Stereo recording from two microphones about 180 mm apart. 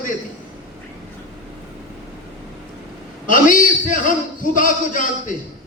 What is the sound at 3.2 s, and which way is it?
A man's voice, 45° left (ahead or behind).